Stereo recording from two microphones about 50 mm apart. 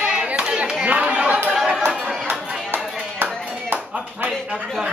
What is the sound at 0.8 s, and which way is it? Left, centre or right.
Chatter, right.